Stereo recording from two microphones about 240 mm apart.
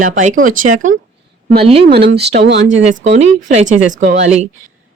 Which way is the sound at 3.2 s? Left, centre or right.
Right.